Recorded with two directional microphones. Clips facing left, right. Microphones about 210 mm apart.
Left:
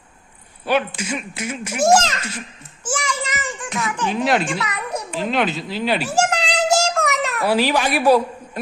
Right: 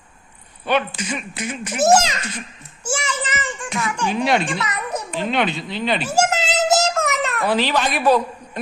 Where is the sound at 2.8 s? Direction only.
10° right (ahead or behind).